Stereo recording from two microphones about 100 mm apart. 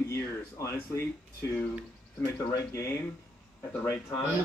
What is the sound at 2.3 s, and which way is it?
Speech, 35° left (ahead or behind).